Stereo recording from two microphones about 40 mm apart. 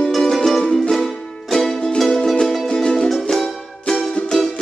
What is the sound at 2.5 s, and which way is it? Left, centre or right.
Music, centre.